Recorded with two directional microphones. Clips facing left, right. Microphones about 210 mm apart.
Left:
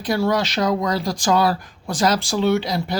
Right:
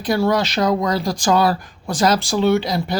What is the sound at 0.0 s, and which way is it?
Speech, 45° right (ahead or behind).